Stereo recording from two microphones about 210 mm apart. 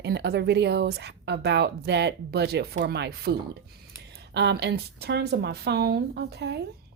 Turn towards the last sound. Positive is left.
turn(degrees=-50)  # may be behind; listen again after turning